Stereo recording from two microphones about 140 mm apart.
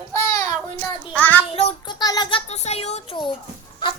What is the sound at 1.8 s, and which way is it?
Speech, 30° left (ahead or behind).